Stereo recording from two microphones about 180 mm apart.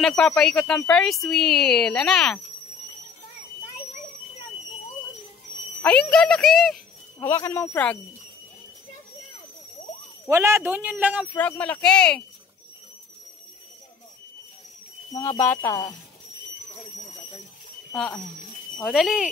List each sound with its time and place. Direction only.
0.0 s speech: 5° left (ahead or behind)
5.8 s speech: 5° left (ahead or behind)
7.2 s speech: 15° left (ahead or behind)
10.2 s a man's voice: 15° right (ahead or behind)
11.3 s speech: 10° left (ahead or behind)
15.1 s speech: 15° left (ahead or behind)
17.9 s speech: centre (ahead or behind)